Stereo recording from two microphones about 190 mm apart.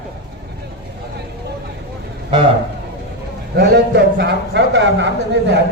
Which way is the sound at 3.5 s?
55° right (ahead or behind).